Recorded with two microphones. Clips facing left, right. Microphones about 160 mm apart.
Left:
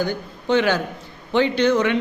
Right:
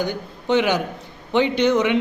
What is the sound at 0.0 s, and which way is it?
A man's voice, 15° right (ahead or behind).